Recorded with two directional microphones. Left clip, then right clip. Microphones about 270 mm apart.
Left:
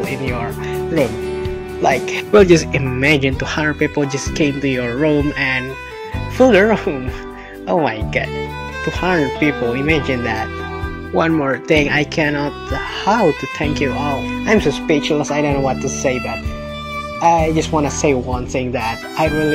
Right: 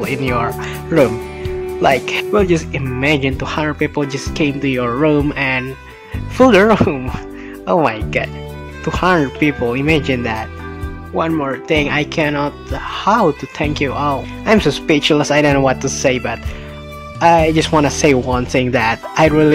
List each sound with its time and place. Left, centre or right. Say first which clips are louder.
0.0 s speech: right 4 dB; centre
2.3 s speech: left 6 dB; centre
11.1 s speech: left 2 dB; centre; by 19.5 s right